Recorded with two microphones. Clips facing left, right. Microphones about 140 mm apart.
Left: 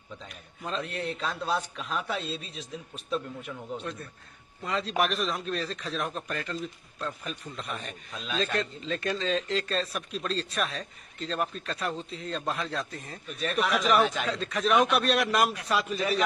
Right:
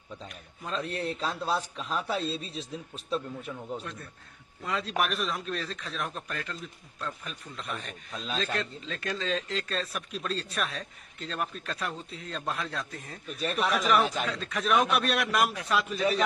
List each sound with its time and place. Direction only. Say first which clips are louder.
0.8 s a man's voice: right 1 dB; 35° right (ahead or behind)
3.7 s speech: left 2 dB; centre (ahead or behind)